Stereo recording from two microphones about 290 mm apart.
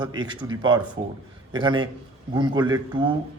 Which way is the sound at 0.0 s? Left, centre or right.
Centre.